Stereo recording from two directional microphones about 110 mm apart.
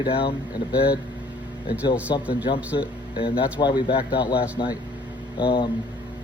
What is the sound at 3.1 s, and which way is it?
Speech, 50° left (ahead or behind).